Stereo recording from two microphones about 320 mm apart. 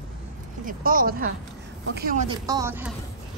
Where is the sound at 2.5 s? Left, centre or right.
Centre.